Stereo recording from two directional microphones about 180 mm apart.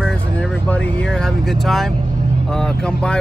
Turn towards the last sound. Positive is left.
turn(degrees=5)  # may be behind; listen again after turning